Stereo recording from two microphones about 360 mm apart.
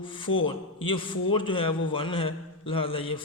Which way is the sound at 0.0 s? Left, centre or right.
Centre.